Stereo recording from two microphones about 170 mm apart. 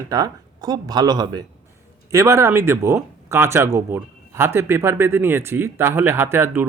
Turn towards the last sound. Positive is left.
turn(degrees=-15)  # may be behind; listen again after turning